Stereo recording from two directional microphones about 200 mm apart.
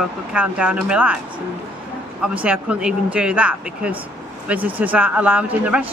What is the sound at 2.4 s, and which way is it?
Speech, 5° right (ahead or behind).